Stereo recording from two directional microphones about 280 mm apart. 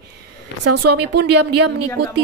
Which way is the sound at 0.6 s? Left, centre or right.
Right.